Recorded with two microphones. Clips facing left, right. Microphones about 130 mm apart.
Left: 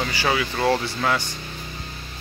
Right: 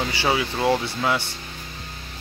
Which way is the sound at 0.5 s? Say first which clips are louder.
Even; 15° right (ahead or behind).